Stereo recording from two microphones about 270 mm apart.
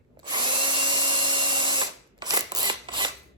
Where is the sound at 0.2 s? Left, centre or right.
Centre.